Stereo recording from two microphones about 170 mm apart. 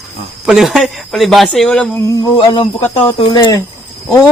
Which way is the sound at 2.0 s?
20° left (ahead or behind).